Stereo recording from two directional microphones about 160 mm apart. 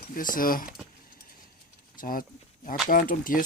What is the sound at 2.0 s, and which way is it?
Speech, 60° left (ahead or behind).